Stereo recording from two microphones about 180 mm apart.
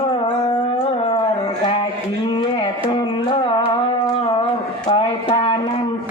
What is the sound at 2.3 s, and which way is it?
Carnatic music, 30° left (ahead or behind).